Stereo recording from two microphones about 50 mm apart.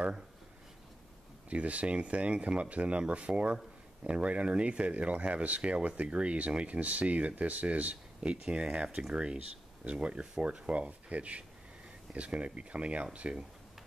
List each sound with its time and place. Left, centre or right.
1.5 s speech: right